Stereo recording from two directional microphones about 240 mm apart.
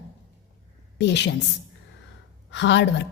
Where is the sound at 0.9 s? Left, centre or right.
Left.